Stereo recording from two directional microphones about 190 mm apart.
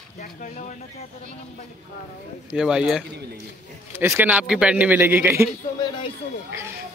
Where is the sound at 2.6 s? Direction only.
5° right (ahead or behind).